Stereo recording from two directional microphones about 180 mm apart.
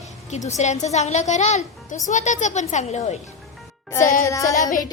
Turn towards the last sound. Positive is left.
turn(degrees=20)  # may be behind; listen again after turning